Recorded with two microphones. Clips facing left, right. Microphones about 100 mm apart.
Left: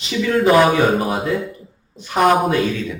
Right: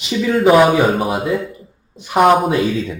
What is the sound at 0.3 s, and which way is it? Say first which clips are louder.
Speech: right 2 dB; 5° right (ahead or behind).